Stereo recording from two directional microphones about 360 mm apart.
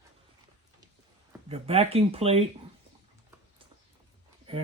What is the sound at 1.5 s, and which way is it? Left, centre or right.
Speech, centre.